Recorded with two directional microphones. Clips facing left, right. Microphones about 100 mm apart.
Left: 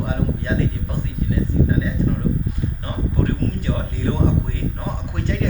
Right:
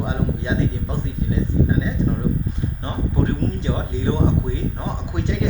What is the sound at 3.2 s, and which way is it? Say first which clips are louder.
Speech: right 1 dB; 20° right (ahead or behind).